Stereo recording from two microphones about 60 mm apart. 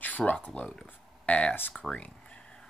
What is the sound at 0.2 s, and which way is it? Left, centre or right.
Speech, left.